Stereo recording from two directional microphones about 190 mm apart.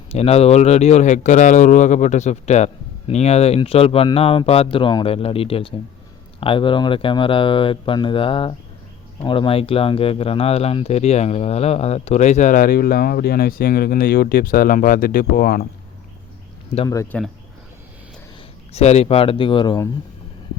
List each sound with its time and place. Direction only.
0.1 s speech: 35° left (ahead or behind); by 15.6 s 50° left (ahead or behind)
16.9 s speech: 15° left (ahead or behind)
18.7 s speech: 35° left (ahead or behind)